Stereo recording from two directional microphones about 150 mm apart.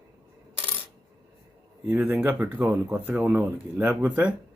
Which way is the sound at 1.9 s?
10° right (ahead or behind).